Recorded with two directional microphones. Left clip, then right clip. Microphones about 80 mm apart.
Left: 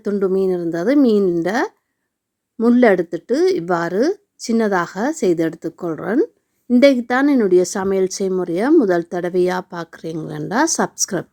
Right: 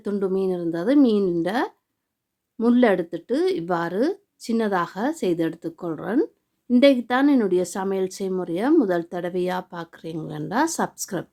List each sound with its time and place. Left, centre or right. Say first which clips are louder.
0.0 s speech: left 6 dB; left
2.7 s speech: left 6 dB; left
7.5 s a woman's voice: left 7 dB; left